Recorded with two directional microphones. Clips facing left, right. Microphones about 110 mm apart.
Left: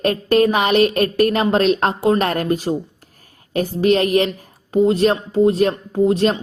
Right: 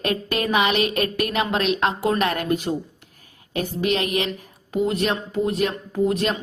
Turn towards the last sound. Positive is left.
turn(degrees=30)  # may be behind; listen again after turning